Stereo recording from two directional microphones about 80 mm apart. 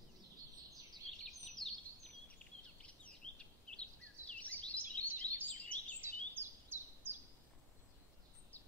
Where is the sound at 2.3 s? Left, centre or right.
Centre.